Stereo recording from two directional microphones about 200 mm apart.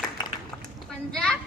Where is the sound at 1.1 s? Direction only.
5° left (ahead or behind).